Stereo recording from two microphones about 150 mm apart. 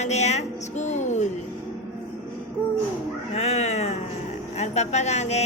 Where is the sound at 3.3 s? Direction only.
45° left (ahead or behind).